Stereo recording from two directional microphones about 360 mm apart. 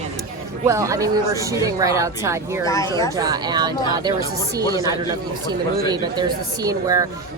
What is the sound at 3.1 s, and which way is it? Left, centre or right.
A man's voice, centre.